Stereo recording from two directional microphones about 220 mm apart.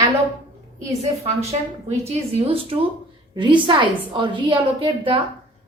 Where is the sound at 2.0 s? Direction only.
25° right (ahead or behind).